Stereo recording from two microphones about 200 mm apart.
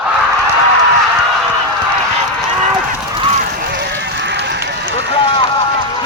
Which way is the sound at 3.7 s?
60° right (ahead or behind).